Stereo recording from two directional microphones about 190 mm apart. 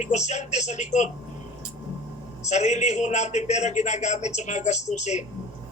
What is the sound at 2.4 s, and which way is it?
A man's voice, 35° left (ahead or behind).